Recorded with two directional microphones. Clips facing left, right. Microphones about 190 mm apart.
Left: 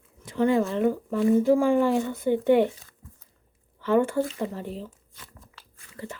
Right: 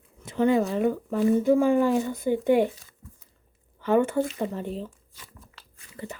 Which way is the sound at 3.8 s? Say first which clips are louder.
Even; 20° right (ahead or behind).